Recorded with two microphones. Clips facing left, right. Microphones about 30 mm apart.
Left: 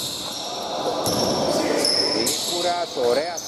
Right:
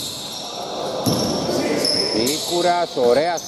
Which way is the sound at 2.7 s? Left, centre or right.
Right.